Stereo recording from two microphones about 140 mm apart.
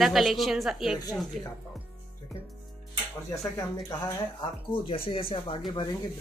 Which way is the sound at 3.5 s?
30° left (ahead or behind).